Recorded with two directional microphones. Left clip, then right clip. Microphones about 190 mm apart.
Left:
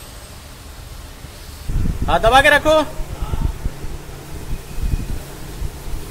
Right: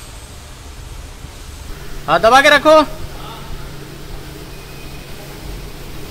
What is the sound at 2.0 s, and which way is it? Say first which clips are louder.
Speech: right 3 dB; 25° right (ahead or behind).